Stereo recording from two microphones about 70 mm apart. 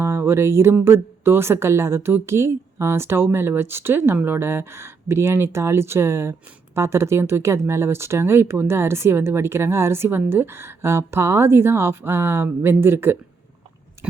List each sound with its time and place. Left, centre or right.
0.0 s music: right
0.9 s speech: right
14.0 s biting: right